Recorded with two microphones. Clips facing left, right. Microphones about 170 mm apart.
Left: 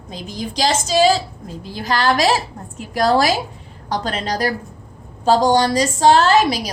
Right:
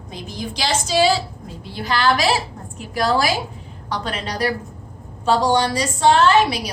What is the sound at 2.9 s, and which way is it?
A woman's voice, 40° left (ahead or behind).